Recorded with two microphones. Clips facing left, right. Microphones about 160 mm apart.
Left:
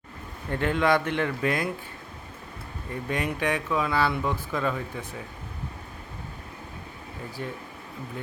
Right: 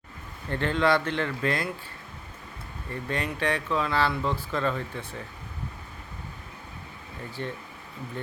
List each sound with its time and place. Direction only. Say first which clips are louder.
0.5 s speech: left 1 dB; 10° left (ahead or behind)
2.9 s speech: left 2 dB; 15° left (ahead or behind)
7.4 s speech: right 1 dB; 5° left (ahead or behind)